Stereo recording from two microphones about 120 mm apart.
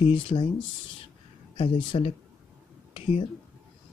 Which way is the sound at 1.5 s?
45° left (ahead or behind).